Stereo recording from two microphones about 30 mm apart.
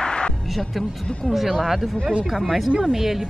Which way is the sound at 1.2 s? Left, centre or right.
Centre.